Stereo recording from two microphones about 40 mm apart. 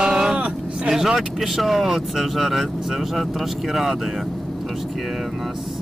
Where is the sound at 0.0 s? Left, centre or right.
Centre.